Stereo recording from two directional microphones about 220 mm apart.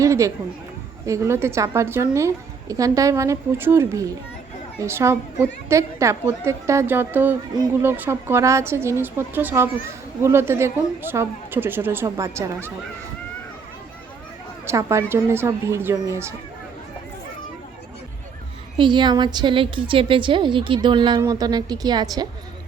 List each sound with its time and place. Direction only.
0.0 s a woman's voice: 15° right (ahead or behind)
14.7 s a woman's voice: 10° right (ahead or behind)
18.8 s a woman's voice: 20° right (ahead or behind)